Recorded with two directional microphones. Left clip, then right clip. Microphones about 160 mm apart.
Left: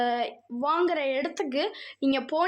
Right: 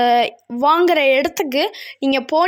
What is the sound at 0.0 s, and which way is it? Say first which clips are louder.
A woman's voice: right 12 dB; 50° right (ahead or behind).